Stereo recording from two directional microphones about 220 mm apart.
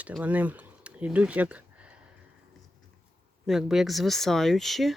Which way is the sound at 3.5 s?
Centre (ahead or behind).